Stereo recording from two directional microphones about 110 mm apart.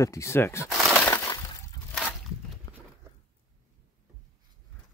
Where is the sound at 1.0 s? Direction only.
25° left (ahead or behind).